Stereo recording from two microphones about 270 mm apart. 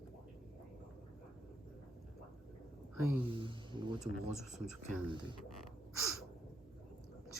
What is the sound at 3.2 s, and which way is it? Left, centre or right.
Speech, centre.